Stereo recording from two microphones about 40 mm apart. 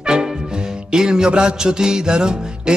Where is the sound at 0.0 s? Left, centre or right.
Right.